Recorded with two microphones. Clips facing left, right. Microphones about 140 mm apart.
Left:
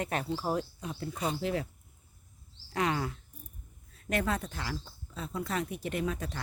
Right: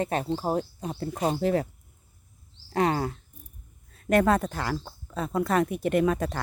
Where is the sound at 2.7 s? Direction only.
35° right (ahead or behind).